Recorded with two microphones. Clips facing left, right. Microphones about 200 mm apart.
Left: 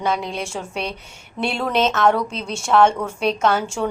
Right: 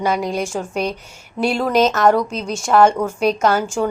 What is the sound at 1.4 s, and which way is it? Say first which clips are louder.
A woman's voice: right 4 dB; centre (ahead or behind).